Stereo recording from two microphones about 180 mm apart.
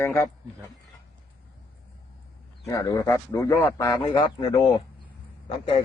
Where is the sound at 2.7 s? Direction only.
20° left (ahead or behind).